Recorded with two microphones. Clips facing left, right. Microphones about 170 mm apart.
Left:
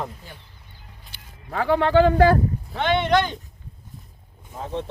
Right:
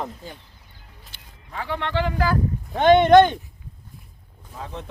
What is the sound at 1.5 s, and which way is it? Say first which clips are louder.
Speech: left 9 dB; 50° left (ahead or behind).